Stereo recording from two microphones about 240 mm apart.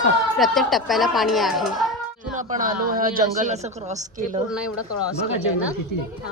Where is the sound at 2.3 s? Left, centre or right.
Right.